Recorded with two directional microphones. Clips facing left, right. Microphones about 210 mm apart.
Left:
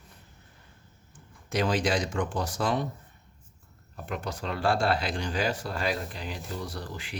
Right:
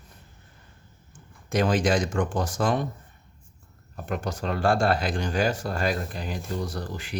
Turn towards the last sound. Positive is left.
turn(degrees=-45)  # may be behind; listen again after turning